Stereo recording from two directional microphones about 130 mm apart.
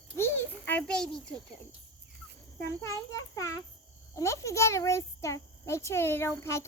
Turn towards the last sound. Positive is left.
turn(degrees=20)  # may be behind; listen again after turning